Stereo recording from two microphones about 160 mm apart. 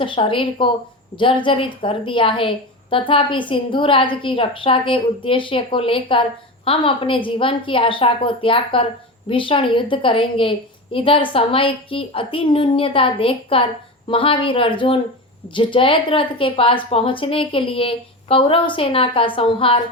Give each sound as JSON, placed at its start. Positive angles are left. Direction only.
{"t": 0.0, "sound": "a woman's voice", "side_deg": 30}